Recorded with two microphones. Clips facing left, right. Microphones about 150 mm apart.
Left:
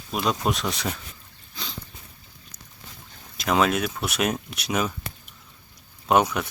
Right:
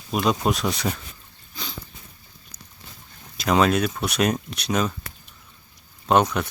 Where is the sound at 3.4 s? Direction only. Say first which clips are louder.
Right 3 dB; centre (ahead or behind).